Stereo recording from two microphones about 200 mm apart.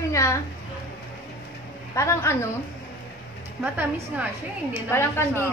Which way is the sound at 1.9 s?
15° left (ahead or behind).